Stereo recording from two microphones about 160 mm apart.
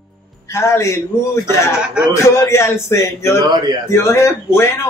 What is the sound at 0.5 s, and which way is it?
Speech, 15° left (ahead or behind).